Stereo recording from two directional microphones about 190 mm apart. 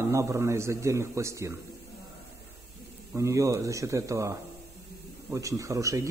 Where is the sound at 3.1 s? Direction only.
15° right (ahead or behind).